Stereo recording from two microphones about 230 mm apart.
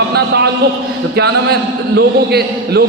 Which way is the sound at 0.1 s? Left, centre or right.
Right.